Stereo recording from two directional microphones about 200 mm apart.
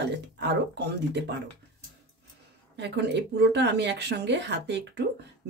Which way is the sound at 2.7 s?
55° right (ahead or behind).